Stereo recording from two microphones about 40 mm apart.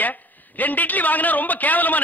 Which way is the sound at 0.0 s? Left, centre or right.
Left.